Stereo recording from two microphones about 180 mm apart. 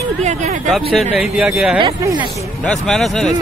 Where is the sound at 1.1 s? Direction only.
Centre (ahead or behind).